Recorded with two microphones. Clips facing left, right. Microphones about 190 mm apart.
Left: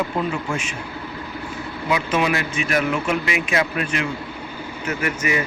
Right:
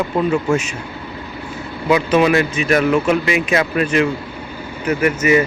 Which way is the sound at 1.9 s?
40° right (ahead or behind).